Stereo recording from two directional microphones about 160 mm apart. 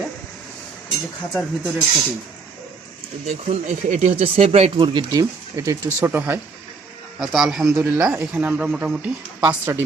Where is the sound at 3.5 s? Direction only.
45° right (ahead or behind); by 6.4 s 15° right (ahead or behind).